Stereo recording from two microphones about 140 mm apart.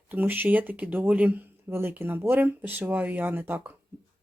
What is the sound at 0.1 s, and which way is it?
Speech, 15° right (ahead or behind).